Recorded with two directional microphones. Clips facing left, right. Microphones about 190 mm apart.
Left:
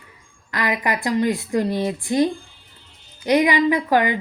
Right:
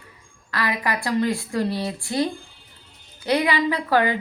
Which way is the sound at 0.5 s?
20° left (ahead or behind).